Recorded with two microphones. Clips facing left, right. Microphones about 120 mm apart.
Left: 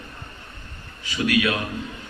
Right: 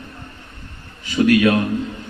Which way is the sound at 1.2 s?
45° right (ahead or behind).